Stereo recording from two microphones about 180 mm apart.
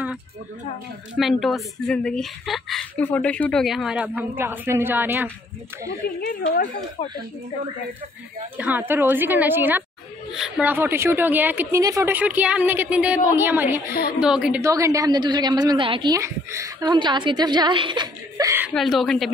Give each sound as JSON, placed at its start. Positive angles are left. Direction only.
{"t": 1.1, "sound": "speech", "side_deg": 0}
{"t": 6.2, "sound": "speech", "side_deg": 50}
{"t": 7.0, "sound": "speech", "side_deg": 30}
{"t": 8.5, "sound": "a woman's voice", "side_deg": -10}
{"t": 14.6, "sound": "a woman's voice", "side_deg": -15}
{"t": 18.7, "sound": "speech", "side_deg": 0}